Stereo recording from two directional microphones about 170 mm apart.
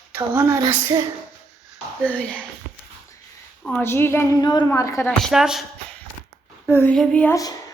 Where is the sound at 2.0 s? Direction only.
10° left (ahead or behind).